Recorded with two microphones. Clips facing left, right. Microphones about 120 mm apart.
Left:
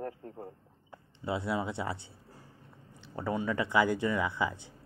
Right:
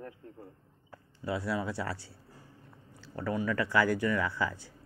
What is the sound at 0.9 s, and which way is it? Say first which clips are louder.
Speech: even; 25° left (ahead or behind).